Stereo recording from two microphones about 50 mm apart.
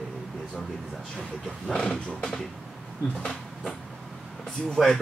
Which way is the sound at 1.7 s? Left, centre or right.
Centre.